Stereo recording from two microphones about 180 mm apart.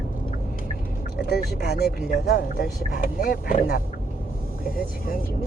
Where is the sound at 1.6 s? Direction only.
65° left (ahead or behind).